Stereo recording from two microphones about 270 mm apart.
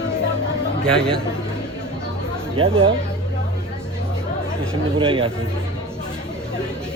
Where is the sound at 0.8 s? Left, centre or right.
Centre.